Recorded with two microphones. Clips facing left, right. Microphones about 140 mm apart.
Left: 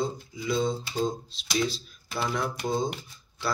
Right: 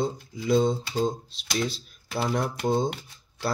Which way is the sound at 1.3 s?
60° right (ahead or behind).